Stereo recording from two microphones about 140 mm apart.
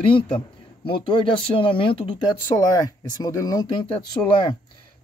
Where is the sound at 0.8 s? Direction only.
40° left (ahead or behind).